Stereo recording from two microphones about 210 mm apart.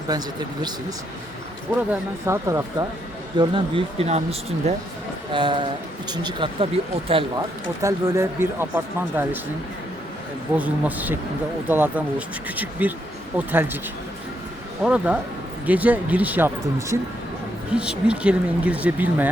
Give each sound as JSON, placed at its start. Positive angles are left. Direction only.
{"t": 0.1, "sound": "speech", "side_deg": -20}
{"t": 1.9, "sound": "speech", "side_deg": -15}
{"t": 7.8, "sound": "speech", "side_deg": -15}
{"t": 10.6, "sound": "speech", "side_deg": -10}
{"t": 14.8, "sound": "speech", "side_deg": -5}